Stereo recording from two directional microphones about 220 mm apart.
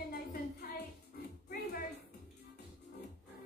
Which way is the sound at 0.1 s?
45° left (ahead or behind).